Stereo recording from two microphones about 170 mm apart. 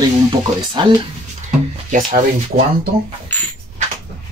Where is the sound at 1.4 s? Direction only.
50° right (ahead or behind).